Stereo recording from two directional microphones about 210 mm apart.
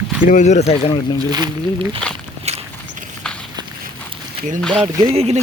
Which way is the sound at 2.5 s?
30° right (ahead or behind).